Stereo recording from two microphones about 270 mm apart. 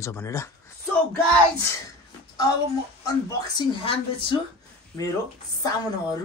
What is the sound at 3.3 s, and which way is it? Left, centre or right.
Speech, centre.